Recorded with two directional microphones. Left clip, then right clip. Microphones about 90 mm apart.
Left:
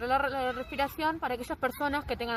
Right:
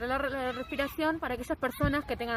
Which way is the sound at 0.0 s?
45° right (ahead or behind).